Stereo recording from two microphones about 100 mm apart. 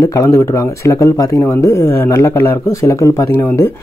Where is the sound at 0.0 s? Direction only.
35° left (ahead or behind).